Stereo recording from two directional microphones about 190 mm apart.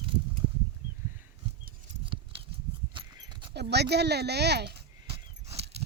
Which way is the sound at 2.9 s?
25° right (ahead or behind).